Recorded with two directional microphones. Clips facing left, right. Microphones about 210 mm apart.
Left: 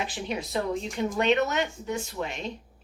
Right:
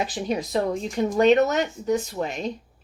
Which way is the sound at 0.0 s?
40° right (ahead or behind).